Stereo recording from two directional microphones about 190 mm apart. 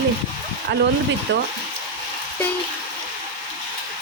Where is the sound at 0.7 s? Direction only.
65° right (ahead or behind).